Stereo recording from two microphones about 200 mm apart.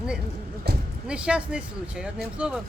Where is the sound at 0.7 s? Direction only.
55° right (ahead or behind).